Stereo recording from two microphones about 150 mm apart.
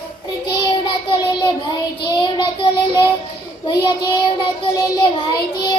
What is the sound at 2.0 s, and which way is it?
Child singing, 30° left (ahead or behind).